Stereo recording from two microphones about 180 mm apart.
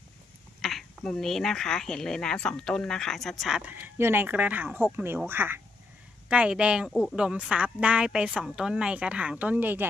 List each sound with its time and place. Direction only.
0.6 s a woman's voice: centre (ahead or behind)